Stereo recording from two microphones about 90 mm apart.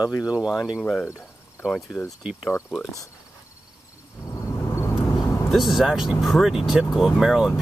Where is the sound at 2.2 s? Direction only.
10° right (ahead or behind).